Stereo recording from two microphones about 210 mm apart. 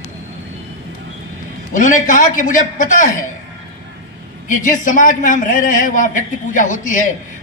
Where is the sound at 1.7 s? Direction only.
35° left (ahead or behind).